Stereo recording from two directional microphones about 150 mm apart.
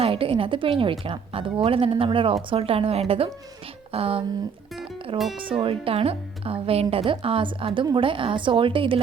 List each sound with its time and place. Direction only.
0.0 s a woman's voice: 40° right (ahead or behind)
5.1 s speech: centre (ahead or behind)
5.5 s a woman's voice: 35° right (ahead or behind)